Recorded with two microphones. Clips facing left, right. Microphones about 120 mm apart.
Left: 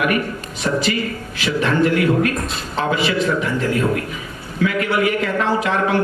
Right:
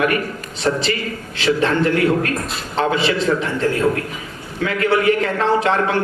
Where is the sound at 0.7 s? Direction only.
60° right (ahead or behind).